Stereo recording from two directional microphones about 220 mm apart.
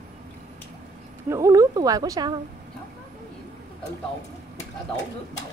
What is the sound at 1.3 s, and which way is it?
A woman's voice, 15° right (ahead or behind).